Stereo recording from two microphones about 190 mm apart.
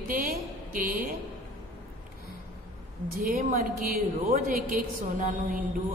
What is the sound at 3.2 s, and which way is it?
A woman's voice, 45° right (ahead or behind).